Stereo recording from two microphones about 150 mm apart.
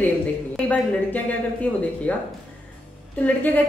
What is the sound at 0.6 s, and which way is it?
Speech, 10° left (ahead or behind).